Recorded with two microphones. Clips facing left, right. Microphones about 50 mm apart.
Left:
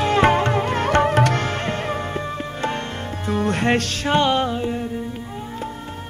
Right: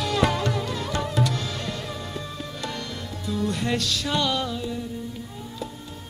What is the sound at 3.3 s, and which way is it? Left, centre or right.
Music, left.